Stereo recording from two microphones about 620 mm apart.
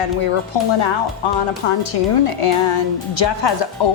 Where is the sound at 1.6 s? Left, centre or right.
Left.